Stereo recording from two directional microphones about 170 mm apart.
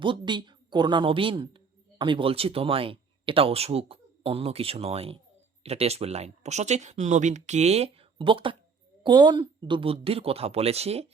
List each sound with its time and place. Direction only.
0.0 s a woman's voice: 30° right (ahead or behind)